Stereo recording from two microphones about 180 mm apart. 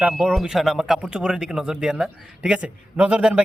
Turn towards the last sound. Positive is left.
turn(degrees=-5)  # may be behind; listen again after turning